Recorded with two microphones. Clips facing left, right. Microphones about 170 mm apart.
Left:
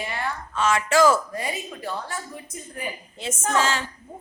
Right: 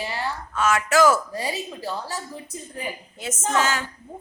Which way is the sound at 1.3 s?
35° right (ahead or behind).